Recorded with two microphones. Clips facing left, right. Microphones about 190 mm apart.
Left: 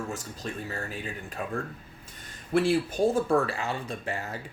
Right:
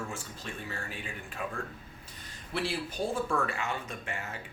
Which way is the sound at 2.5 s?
45° left (ahead or behind).